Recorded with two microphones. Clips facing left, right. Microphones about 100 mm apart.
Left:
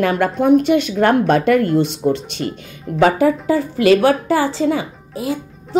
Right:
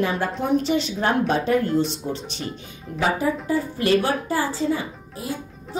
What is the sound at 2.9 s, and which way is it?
A woman's voice, 80° left.